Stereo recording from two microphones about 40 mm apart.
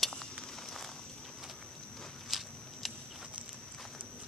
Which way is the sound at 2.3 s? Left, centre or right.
Centre.